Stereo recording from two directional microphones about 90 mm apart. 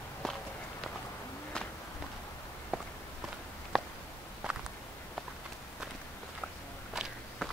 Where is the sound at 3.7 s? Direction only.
Centre (ahead or behind).